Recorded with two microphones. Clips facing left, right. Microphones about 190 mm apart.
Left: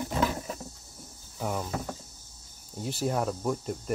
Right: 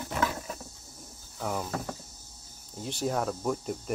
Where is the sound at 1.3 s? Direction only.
5° left (ahead or behind).